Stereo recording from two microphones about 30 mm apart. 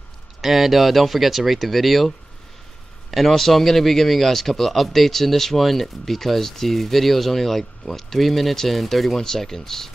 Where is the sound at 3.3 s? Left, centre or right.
Centre.